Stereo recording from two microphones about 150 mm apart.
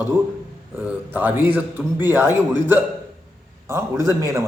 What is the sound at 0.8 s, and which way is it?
A man's voice, 10° right (ahead or behind).